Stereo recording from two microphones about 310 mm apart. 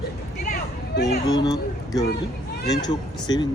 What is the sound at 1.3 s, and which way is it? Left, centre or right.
Speech, centre.